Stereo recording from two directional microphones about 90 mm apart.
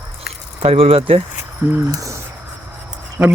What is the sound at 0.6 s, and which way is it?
Speech, 90° right.